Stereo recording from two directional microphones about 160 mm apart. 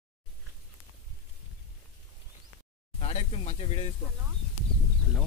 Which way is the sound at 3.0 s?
40° left (ahead or behind).